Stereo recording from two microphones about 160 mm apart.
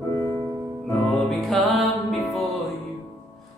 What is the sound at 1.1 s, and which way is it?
Music, centre (ahead or behind).